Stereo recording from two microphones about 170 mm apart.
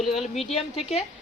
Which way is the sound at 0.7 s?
35° left (ahead or behind).